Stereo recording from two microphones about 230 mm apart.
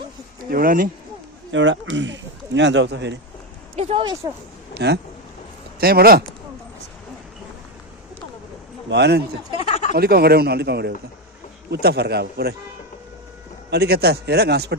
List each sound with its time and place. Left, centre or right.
0.5 s speech: right
1.5 s speech: right
3.7 s speech: right
4.7 s speech: right
8.8 s a man's voice: right
9.6 s a sound: left
9.9 s speech: right
13.7 s speech: right